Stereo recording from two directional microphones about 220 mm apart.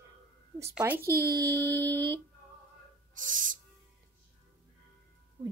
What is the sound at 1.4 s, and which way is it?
Speech, 15° right (ahead or behind).